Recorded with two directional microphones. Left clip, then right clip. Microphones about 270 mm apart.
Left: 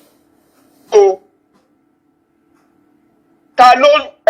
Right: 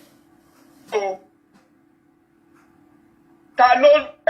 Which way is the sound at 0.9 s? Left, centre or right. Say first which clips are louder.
Left 14 dB; left.